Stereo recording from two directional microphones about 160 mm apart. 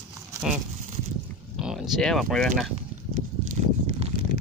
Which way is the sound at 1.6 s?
Centre (ahead or behind).